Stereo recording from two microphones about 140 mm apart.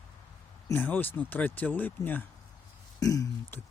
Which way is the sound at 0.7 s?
15° left (ahead or behind).